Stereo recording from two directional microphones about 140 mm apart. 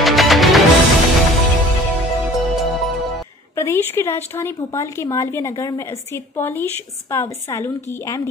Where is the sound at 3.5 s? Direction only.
20° left (ahead or behind).